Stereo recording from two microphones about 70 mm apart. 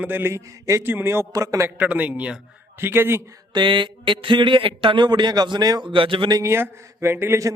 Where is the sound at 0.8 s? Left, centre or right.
Right.